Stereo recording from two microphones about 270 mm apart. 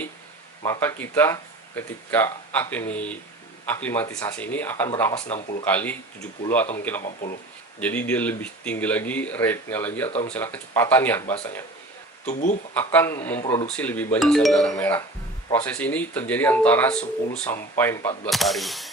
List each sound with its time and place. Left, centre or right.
0.6 s speech: centre
12.3 s speech: left
12.7 s speech: centre